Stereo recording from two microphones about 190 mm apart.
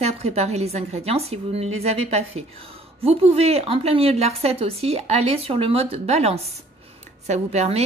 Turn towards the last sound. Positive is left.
turn(degrees=-35)  # may be behind; listen again after turning